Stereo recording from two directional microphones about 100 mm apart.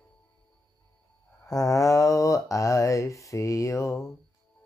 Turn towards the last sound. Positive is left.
turn(degrees=30)  # may be behind; listen again after turning